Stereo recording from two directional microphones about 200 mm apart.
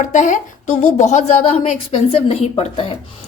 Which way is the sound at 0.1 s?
40° left (ahead or behind).